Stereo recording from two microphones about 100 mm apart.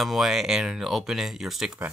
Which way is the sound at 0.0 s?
5° right (ahead or behind).